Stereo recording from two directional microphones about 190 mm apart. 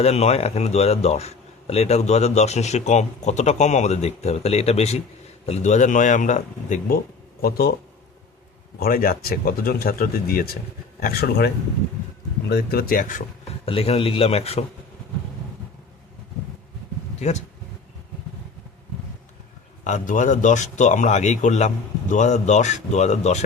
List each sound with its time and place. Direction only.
0.0 s speech: 35° left (ahead or behind); by 7.7 s 55° left (ahead or behind)
8.8 s speech: 50° left (ahead or behind)
13.7 s speech: 30° left (ahead or behind)
17.2 s speech: 35° left (ahead or behind)
19.8 s speech: 40° left (ahead or behind)